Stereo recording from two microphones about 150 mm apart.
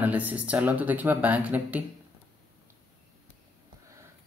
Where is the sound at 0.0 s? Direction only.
10° right (ahead or behind).